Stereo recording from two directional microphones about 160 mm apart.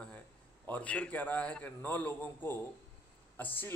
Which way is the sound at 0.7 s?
10° left (ahead or behind).